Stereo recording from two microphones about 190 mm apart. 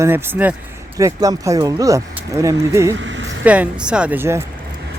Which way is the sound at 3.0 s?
75° right (ahead or behind).